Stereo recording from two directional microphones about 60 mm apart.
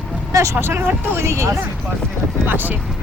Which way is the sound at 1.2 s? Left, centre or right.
Right.